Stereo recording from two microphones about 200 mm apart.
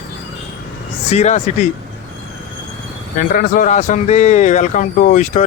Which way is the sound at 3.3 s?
40° left (ahead or behind).